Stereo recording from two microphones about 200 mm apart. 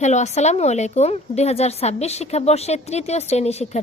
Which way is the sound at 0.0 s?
35° left (ahead or behind).